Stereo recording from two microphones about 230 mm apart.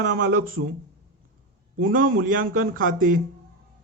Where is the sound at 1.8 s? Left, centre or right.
Right.